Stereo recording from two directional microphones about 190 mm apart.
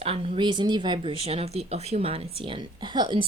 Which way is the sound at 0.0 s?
30° right (ahead or behind).